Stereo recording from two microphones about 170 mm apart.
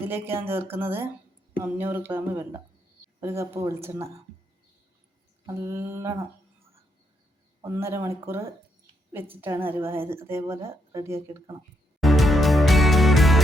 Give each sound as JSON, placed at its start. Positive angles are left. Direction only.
{"t": 0.0, "sound": "speech", "side_deg": -15}
{"t": 5.5, "sound": "speech", "side_deg": -15}
{"t": 7.6, "sound": "speech", "side_deg": -15}
{"t": 11.9, "sound": "music", "side_deg": 0}